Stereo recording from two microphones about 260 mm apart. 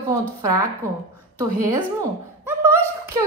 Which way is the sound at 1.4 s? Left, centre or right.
Centre.